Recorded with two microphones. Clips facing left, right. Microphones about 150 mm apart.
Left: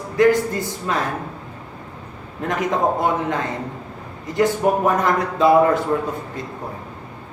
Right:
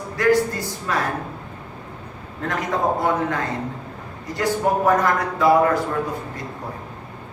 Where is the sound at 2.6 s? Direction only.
20° left (ahead or behind).